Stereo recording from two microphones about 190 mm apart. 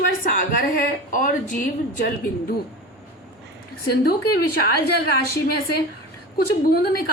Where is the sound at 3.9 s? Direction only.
55° left (ahead or behind).